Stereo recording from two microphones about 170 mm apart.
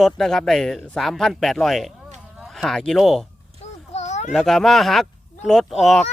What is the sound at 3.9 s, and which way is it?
Children playing, 45° left (ahead or behind).